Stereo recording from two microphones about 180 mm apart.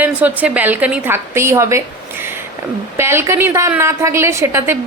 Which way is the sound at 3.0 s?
15° right (ahead or behind).